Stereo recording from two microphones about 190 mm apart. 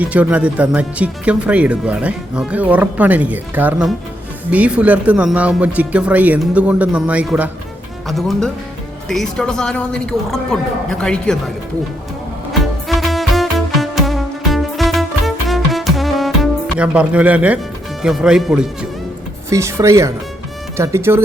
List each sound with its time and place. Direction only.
0.0 s speech: 5° right (ahead or behind)
12.9 s music: centre (ahead or behind)
18.0 s speech: 5° right (ahead or behind)
19.5 s speech: 15° right (ahead or behind)